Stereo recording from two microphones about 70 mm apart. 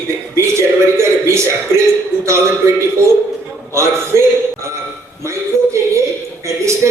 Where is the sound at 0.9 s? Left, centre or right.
Right.